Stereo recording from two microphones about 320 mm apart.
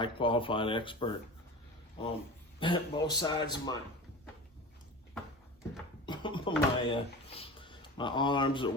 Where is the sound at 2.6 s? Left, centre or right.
Centre.